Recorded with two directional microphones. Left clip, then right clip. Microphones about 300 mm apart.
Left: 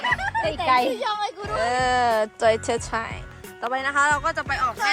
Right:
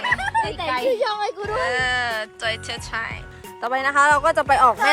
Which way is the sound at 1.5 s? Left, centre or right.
Centre.